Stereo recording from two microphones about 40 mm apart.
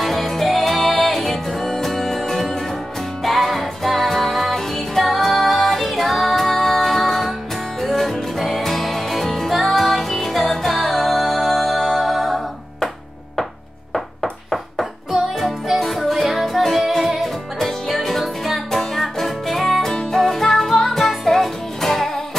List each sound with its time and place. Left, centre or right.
0.0 s music: centre
15.4 s music: centre